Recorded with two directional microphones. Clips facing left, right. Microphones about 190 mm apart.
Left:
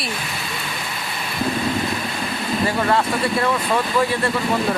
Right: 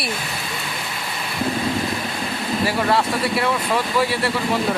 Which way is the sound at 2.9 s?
10° right (ahead or behind).